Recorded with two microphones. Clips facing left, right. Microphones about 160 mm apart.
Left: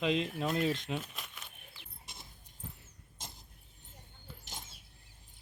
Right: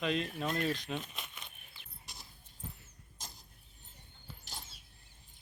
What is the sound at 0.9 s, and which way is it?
Speech, 5° left (ahead or behind).